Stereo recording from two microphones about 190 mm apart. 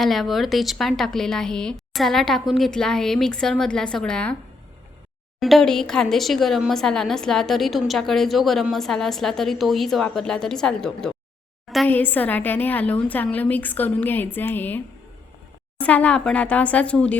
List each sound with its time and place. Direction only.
0.0 s speech: centre (ahead or behind)
5.4 s a woman's voice: centre (ahead or behind)
15.8 s a woman's voice: 5° left (ahead or behind)